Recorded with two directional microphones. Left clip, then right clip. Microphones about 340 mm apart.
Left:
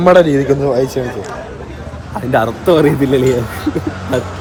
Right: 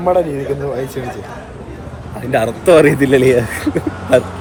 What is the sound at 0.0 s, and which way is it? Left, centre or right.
Speech, left.